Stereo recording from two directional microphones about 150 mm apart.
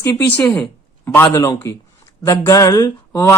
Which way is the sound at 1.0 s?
15° left (ahead or behind).